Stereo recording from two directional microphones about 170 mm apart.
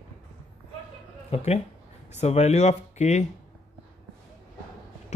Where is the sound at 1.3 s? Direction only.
40° left (ahead or behind).